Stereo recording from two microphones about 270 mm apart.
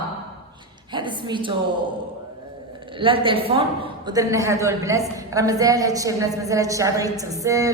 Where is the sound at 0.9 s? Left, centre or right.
Centre.